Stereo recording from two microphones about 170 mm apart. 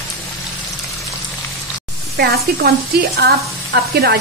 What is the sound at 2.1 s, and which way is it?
A woman's voice, 65° right (ahead or behind).